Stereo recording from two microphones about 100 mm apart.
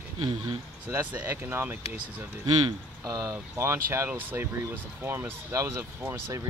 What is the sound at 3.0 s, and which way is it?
Speech, 35° right (ahead or behind).